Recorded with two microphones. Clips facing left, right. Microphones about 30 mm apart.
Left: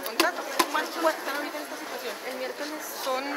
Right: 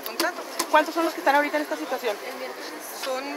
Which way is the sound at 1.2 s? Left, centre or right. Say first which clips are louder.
Right 11 dB; right.